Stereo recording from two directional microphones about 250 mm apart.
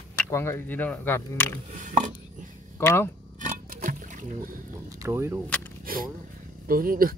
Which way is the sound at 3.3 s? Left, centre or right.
Right.